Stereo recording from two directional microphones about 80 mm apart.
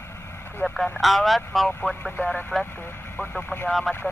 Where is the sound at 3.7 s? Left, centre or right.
Centre.